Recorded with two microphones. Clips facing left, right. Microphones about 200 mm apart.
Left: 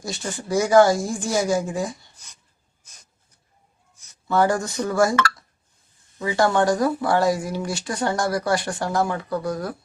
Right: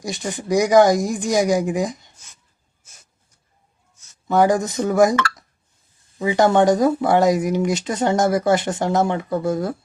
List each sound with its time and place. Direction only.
0.0 s speech: 15° right (ahead or behind)
4.3 s speech: 15° right (ahead or behind)
6.1 s speech: 20° right (ahead or behind)